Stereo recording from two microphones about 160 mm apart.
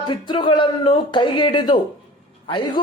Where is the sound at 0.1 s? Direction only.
30° left (ahead or behind).